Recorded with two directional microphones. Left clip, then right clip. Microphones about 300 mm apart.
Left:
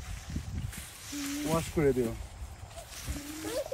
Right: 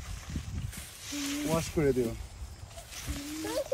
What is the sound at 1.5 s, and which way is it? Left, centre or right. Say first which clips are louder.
Speech: left 1 dB; centre.